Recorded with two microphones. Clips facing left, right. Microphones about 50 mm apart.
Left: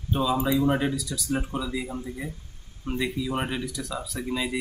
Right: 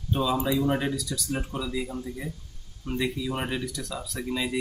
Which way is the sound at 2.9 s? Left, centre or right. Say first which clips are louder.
Left 1 dB; centre.